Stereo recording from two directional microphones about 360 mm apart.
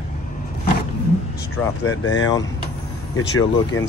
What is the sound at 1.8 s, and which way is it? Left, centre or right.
Speech, left.